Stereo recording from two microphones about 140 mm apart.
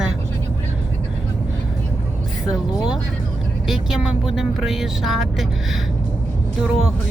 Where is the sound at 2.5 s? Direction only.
5° right (ahead or behind).